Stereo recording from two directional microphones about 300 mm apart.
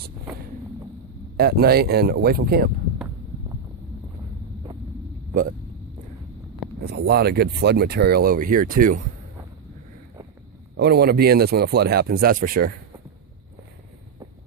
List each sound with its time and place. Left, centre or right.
1.4 s speech: right
6.9 s speech: right
10.8 s speech: right